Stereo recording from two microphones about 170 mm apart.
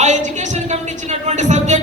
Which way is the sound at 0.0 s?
45° right (ahead or behind).